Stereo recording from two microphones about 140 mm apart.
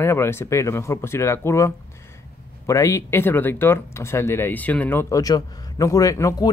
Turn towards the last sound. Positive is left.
turn(degrees=25)  # may be behind; listen again after turning